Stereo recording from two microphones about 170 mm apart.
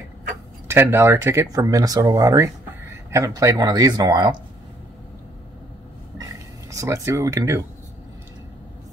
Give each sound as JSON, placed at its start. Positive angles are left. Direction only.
{"t": 0.7, "sound": "speech", "side_deg": -15}
{"t": 6.7, "sound": "speech", "side_deg": -20}